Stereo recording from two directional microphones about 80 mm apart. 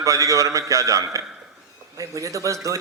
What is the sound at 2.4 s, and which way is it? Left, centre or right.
Speech, right.